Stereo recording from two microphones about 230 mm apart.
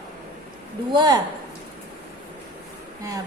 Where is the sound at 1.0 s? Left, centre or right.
Centre.